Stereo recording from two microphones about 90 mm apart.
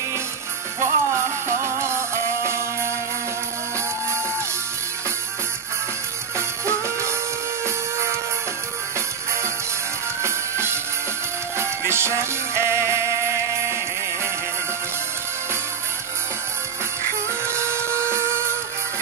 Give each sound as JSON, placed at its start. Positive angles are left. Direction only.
{"t": 0.7, "sound": "music", "side_deg": -30}
{"t": 6.3, "sound": "music", "side_deg": -30}
{"t": 10.2, "sound": "music", "side_deg": -30}
{"t": 17.5, "sound": "printer", "side_deg": -30}